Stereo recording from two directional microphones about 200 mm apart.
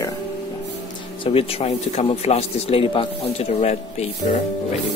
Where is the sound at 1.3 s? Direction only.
30° left (ahead or behind).